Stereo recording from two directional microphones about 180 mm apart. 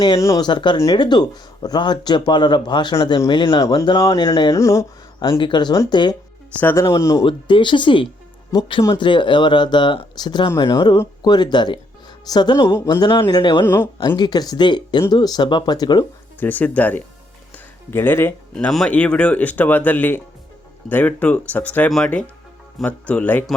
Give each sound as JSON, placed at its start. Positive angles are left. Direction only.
{"t": 0.0, "sound": "speech", "side_deg": 20}
{"t": 16.4, "sound": "speech", "side_deg": 10}